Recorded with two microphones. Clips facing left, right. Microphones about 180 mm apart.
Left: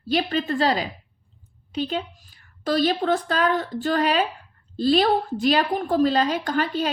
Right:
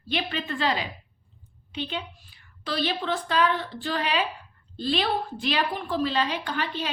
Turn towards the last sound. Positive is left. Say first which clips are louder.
# left 6 dB
turn(degrees=40)  # may be behind; listen again after turning